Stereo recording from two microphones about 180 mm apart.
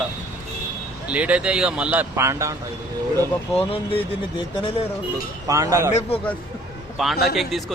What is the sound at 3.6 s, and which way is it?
Speech, 30° left (ahead or behind).